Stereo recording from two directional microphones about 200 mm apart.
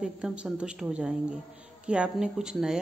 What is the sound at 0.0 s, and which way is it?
A woman's voice, 5° right (ahead or behind).